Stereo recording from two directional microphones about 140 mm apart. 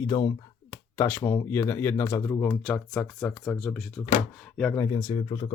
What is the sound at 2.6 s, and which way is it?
Speech, 5° left (ahead or behind).